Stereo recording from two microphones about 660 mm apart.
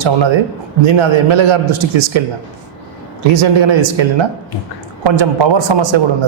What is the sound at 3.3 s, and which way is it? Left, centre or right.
Speech, right.